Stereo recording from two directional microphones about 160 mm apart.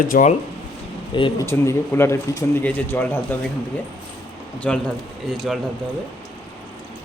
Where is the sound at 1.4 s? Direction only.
15° left (ahead or behind).